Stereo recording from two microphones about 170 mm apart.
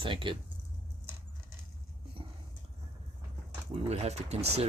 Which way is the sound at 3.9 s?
40° right (ahead or behind).